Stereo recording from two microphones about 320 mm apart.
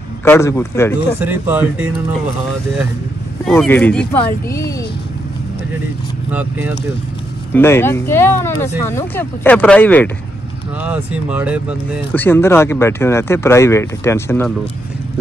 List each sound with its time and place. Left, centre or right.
0.2 s speech: centre
1.2 s speech: centre
3.4 s speech: centre
7.5 s speech: centre
11.1 s speech: centre
12.1 s speech: centre